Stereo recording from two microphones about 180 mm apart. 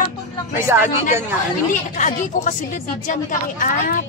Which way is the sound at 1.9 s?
45° left (ahead or behind).